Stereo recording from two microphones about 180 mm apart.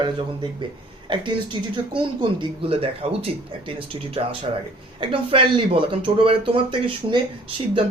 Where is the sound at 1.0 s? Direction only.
25° right (ahead or behind).